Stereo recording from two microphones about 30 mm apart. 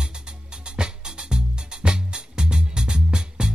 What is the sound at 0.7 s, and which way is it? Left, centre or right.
Music, right.